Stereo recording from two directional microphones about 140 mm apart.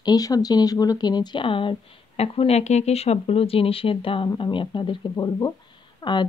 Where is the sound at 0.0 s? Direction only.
25° left (ahead or behind).